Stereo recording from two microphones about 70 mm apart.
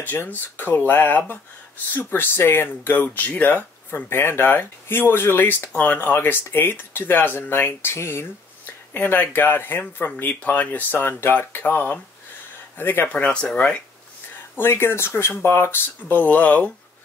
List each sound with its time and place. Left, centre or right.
0.0 s speech: left
8.9 s speech: left
13.1 s speech: centre
14.6 s speech: left